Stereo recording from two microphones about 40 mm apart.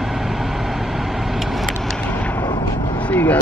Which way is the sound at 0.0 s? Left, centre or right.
Centre.